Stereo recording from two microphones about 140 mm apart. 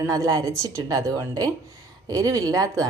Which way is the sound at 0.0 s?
25° right (ahead or behind).